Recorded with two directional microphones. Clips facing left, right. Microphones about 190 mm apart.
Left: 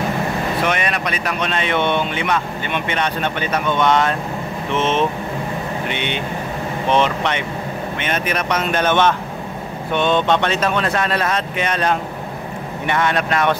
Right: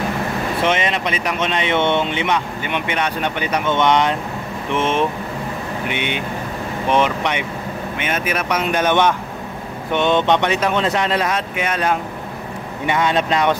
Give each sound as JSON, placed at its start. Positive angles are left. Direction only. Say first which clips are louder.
{"t": 0.7, "sound": "speech", "louder": "right 2 dB", "side_deg": -20}